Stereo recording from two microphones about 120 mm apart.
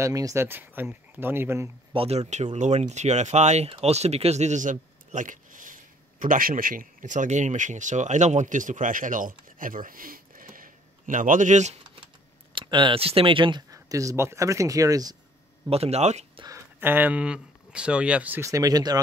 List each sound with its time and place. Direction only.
0.0 s speech: 25° right (ahead or behind)
2.0 s a man's voice: 60° right (ahead or behind); by 9.7 s 90° right
11.1 s speech: 90° right
12.5 s speech: 40° right (ahead or behind)
15.7 s speech: 60° right (ahead or behind)
16.4 s speech: 20° right (ahead or behind)
18.4 s speech: 30° right (ahead or behind)